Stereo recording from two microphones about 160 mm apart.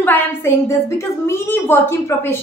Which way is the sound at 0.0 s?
10° left (ahead or behind).